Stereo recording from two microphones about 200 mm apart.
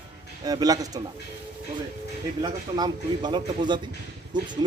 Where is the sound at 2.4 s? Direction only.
20° right (ahead or behind).